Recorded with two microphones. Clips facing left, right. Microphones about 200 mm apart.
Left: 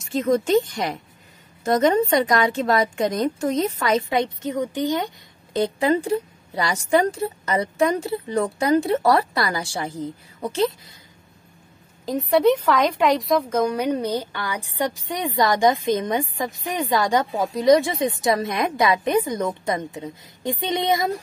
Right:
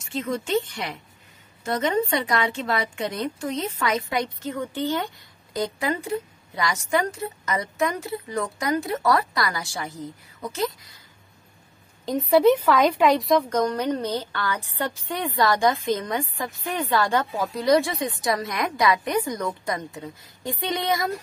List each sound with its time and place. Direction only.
0.1 s a woman's voice: 40° left (ahead or behind)
12.1 s a woman's voice: centre (ahead or behind); by 21.1 s 20° left (ahead or behind)